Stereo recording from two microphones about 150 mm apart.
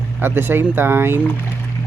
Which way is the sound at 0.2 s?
15° right (ahead or behind).